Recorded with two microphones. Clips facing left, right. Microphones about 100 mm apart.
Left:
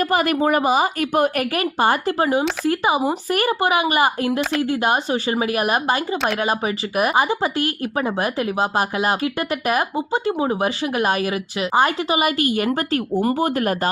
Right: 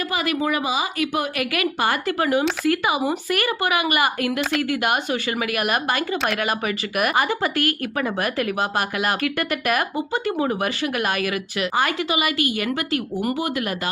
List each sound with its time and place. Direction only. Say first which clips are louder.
0.1 s a woman's voice: left 2 dB; 45° left (ahead or behind)
1.6 s speech: left 4 dB; 35° left (ahead or behind)